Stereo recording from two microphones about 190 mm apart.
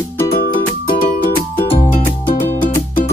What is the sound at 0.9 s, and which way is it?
Music, 50° left (ahead or behind).